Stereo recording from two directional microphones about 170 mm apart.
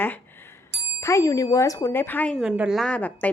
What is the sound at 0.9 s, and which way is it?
A woman's voice, 15° left (ahead or behind).